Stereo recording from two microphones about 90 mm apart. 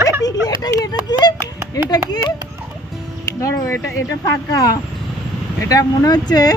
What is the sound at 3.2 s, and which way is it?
Speech, 30° left (ahead or behind).